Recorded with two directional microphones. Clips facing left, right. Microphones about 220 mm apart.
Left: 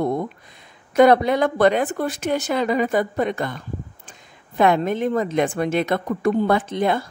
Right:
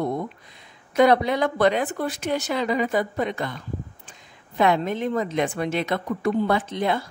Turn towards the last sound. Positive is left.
turn(degrees=50)  # may be behind; listen again after turning